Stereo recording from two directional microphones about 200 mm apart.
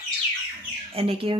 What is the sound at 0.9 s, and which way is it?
Speech, 25° right (ahead or behind).